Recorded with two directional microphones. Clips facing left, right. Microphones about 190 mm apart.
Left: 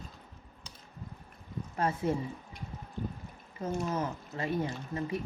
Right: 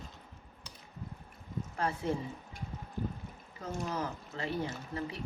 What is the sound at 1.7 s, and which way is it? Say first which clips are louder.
Speech: left 3 dB; 25° left (ahead or behind).